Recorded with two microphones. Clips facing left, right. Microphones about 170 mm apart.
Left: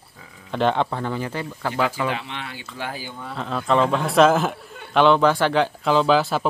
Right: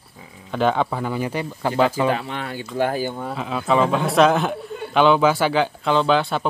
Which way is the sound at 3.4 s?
5° right (ahead or behind).